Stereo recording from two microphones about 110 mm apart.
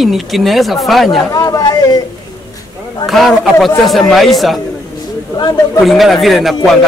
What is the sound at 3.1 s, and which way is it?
A man's voice, centre (ahead or behind).